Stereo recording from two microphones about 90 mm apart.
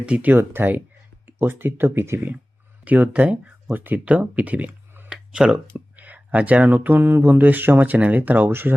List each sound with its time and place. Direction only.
0.0 s speech: 15° right (ahead or behind)
5.1 s a sound: 10° right (ahead or behind)
5.6 s speech: 20° right (ahead or behind)